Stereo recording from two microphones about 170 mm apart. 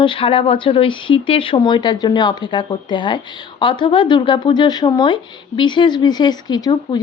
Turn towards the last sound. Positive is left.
turn(degrees=25)  # may be behind; listen again after turning